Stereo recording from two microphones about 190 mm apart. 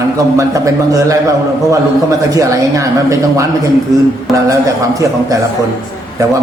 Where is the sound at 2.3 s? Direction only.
15° right (ahead or behind).